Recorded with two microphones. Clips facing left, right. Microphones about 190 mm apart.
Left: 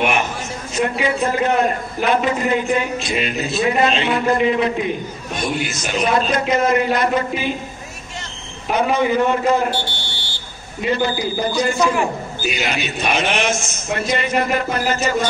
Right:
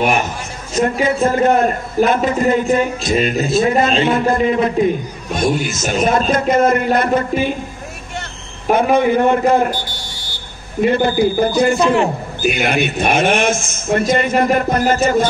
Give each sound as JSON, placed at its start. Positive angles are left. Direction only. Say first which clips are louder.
{"t": 0.7, "sound": "a man's voice", "louder": "right 4 dB", "side_deg": -45}
{"t": 8.6, "sound": "a man's voice", "louder": "right 4 dB", "side_deg": -50}
{"t": 9.8, "sound": "buzzer", "louder": "left 1 dB", "side_deg": 30}
{"t": 10.8, "sound": "a man's voice", "louder": "right 6 dB", "side_deg": -55}
{"t": 11.8, "sound": "a man's voice", "louder": "right 4 dB", "side_deg": -25}
{"t": 12.4, "sound": "a man's voice", "louder": "right 7 dB", "side_deg": -55}